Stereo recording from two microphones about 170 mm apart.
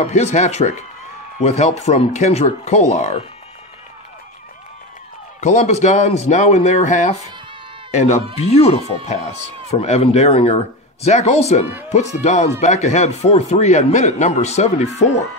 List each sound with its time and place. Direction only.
0.0 s speech: 45° left (ahead or behind)
5.4 s speech: 45° left (ahead or behind)